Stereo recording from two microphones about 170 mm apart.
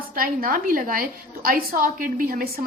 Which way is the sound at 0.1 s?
55° right (ahead or behind).